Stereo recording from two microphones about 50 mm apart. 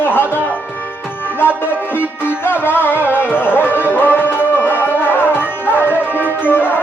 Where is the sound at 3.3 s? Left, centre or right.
Left.